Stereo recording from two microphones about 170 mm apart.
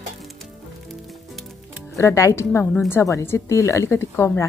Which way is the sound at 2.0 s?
20° left (ahead or behind).